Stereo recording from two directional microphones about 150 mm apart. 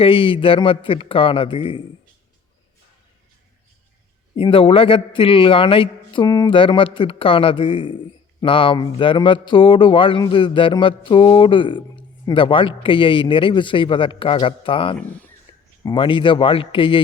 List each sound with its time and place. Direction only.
0.0 s speech: 35° left (ahead or behind)
4.4 s speech: 35° left (ahead or behind)
14.9 s speech: 10° left (ahead or behind)
15.5 s a sound: 30° left (ahead or behind)
15.8 s speech: 30° left (ahead or behind)